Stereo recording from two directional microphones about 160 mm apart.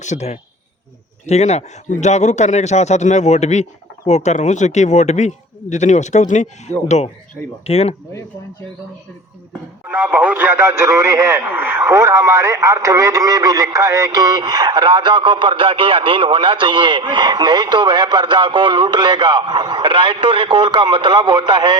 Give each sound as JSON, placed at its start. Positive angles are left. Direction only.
{"t": 0.0, "sound": "a man's voice", "side_deg": 45}
{"t": 9.8, "sound": "speech", "side_deg": -10}